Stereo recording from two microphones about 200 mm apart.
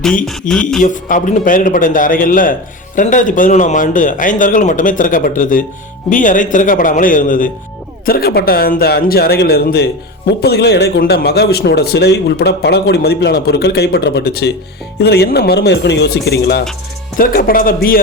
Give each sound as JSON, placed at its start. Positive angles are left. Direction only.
{"t": 0.3, "sound": "music", "side_deg": 0}
{"t": 0.8, "sound": "a man's voice", "side_deg": 40}